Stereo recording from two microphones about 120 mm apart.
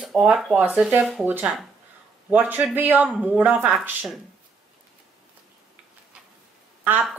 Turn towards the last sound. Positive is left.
turn(degrees=-15)  # may be behind; listen again after turning